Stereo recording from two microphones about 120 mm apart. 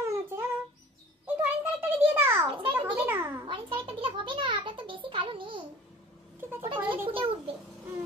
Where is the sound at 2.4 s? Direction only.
45° right (ahead or behind).